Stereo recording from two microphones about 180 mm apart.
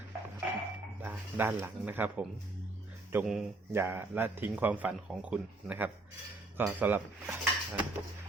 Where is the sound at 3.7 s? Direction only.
15° right (ahead or behind).